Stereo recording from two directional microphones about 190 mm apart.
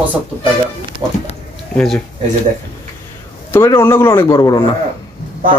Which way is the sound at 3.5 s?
10° left (ahead or behind).